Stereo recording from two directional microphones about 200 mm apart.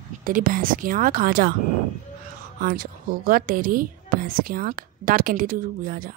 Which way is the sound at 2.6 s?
45° right (ahead or behind).